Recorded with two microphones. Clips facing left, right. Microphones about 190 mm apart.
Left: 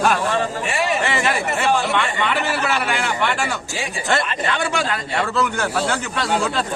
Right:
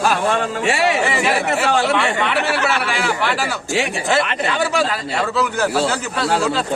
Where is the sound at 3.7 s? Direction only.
70° right (ahead or behind).